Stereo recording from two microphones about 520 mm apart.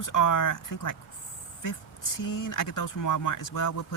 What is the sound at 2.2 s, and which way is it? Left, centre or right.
Speech, left.